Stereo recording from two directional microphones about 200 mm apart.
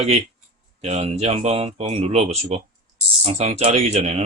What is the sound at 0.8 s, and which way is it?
Speech, 30° right (ahead or behind).